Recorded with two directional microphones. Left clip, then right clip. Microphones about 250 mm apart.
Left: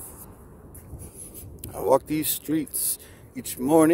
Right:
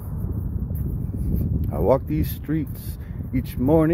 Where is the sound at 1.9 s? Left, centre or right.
Centre.